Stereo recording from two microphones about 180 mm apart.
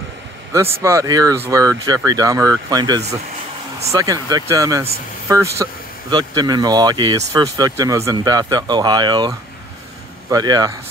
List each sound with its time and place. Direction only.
0.8 s speech: 20° right (ahead or behind)
10.3 s speech: 20° right (ahead or behind)